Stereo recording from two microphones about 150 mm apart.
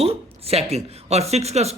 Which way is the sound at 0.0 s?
40° right (ahead or behind).